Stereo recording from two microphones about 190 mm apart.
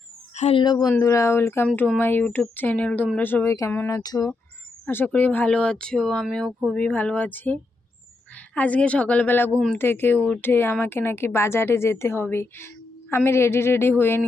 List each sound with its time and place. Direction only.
0.3 s speech: 35° left (ahead or behind)
0.6 s speech: 20° left (ahead or behind)